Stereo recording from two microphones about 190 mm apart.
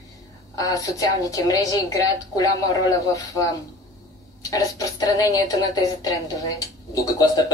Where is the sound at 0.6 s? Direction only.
20° left (ahead or behind).